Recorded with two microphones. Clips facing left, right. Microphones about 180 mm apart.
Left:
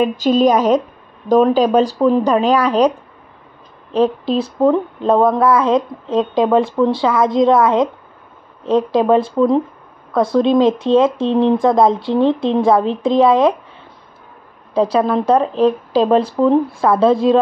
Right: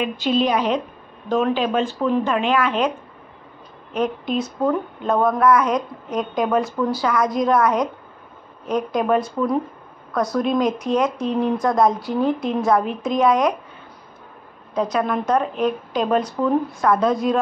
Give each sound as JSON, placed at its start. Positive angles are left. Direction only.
{"t": 0.0, "sound": "a woman's voice", "side_deg": 40}
{"t": 3.9, "sound": "speech", "side_deg": 30}
{"t": 14.7, "sound": "speech", "side_deg": 30}